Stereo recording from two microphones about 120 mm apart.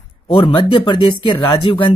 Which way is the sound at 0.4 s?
45° left (ahead or behind).